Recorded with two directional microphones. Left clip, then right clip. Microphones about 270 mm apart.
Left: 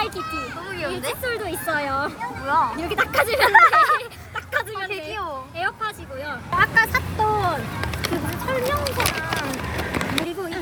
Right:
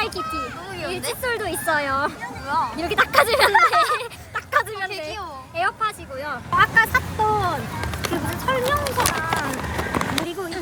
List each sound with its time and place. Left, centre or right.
0.2 s speech: right
0.8 s speech: centre
3.5 s speech: centre
4.4 s a sound: centre
4.9 s speech: centre
9.7 s a sound: centre